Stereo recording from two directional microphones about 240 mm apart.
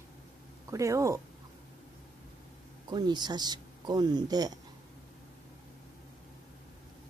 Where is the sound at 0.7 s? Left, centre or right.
Centre.